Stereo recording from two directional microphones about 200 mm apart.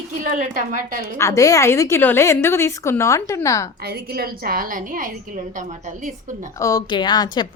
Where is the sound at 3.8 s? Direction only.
50° right (ahead or behind).